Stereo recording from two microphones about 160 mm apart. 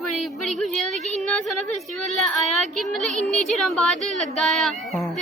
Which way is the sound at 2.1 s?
Centre (ahead or behind).